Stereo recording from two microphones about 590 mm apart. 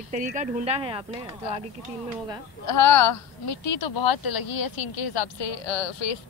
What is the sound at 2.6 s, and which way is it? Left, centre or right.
A woman's voice, left.